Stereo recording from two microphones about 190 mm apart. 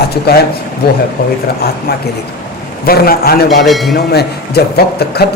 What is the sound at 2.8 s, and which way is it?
Speech, 55° left (ahead or behind).